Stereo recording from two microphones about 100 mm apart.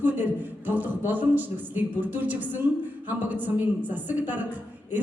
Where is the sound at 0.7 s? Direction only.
15° right (ahead or behind).